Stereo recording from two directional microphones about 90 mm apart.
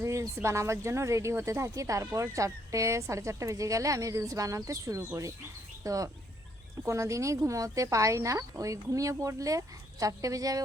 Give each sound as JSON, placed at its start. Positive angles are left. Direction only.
{"t": 0.0, "sound": "a sound", "side_deg": -35}
{"t": 0.4, "sound": "speech", "side_deg": -35}
{"t": 5.8, "sound": "fowl", "side_deg": -40}
{"t": 6.8, "sound": "speech", "side_deg": -35}